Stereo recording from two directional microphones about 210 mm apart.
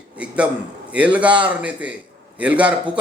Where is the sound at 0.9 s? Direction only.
5° right (ahead or behind).